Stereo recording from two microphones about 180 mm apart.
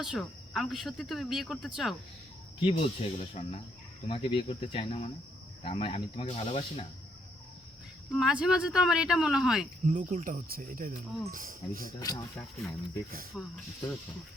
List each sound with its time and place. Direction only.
0.0 s speech: centre (ahead or behind)
2.6 s speech: 35° left (ahead or behind)
8.1 s speech: 5° right (ahead or behind)
9.8 s cricket: 45° right (ahead or behind)
12.1 s speech: 20° left (ahead or behind)
13.3 s speech: centre (ahead or behind)